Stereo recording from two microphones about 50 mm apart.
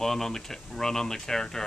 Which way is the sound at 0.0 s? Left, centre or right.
Centre.